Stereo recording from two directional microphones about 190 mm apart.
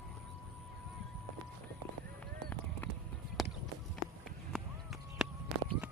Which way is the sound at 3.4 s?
Centre (ahead or behind).